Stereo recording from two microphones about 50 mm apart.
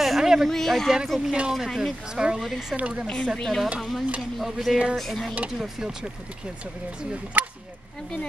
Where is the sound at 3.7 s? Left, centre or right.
Centre.